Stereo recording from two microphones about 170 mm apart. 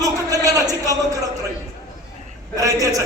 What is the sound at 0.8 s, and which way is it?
Speech, 20° right (ahead or behind).